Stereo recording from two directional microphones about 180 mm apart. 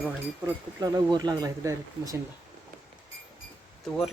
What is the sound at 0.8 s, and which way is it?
Speech, 20° right (ahead or behind).